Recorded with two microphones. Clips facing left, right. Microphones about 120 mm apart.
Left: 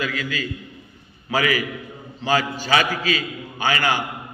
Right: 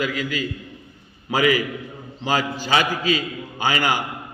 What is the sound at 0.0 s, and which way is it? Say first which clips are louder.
A man's voice: right 2 dB; 15° right (ahead or behind).